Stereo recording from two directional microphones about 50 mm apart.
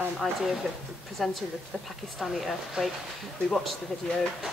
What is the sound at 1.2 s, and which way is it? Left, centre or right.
A woman's voice, centre.